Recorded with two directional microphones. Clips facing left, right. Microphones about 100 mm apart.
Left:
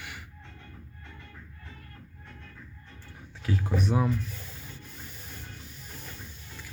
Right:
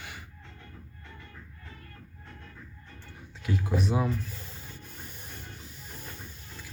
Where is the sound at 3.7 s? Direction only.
10° right (ahead or behind).